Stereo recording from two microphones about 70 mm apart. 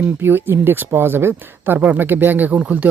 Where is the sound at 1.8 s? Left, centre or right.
Centre.